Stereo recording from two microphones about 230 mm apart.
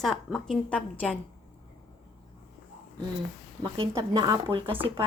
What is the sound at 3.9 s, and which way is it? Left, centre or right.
Speech, centre.